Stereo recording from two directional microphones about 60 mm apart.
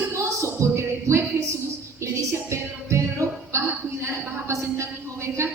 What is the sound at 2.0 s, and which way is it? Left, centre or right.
Music, right.